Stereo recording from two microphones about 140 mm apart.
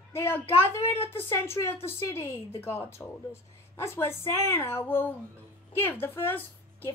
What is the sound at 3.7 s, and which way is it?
A woman's voice, 15° left (ahead or behind).